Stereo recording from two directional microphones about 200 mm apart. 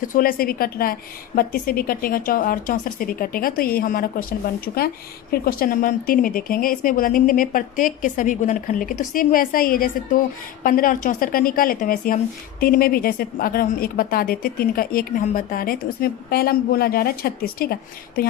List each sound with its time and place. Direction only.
0.0 s speech: 45° left (ahead or behind)